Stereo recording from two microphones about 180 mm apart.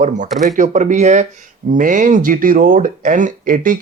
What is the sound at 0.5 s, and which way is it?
Speech, 45° right (ahead or behind).